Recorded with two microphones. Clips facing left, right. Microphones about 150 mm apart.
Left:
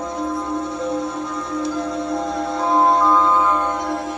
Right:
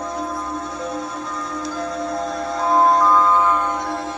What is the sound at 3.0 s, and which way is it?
Music, centre (ahead or behind).